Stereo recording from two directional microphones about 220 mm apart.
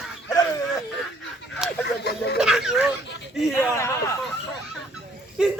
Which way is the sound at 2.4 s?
Centre (ahead or behind).